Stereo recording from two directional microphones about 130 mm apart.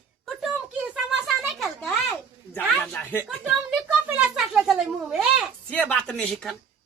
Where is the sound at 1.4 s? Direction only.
5° left (ahead or behind).